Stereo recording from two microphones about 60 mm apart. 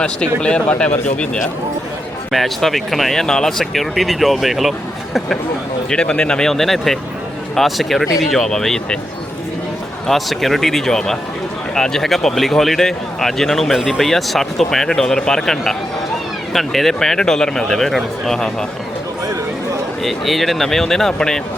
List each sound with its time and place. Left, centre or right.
0.0 s speech: centre
2.3 s speech: centre
5.9 s speech: centre
10.1 s speech: centre
20.0 s speech: centre